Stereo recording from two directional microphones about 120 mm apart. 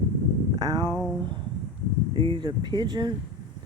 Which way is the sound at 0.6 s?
35° right (ahead or behind).